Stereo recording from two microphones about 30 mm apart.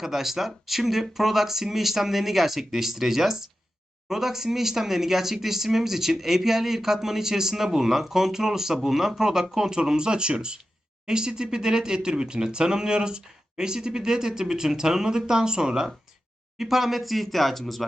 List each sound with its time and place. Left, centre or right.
0.0 s speech: centre
16.6 s speech: centre